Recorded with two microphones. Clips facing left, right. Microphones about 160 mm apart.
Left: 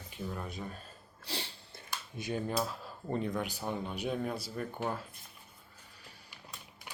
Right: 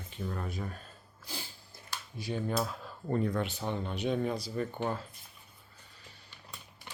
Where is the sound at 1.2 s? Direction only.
75° left (ahead or behind).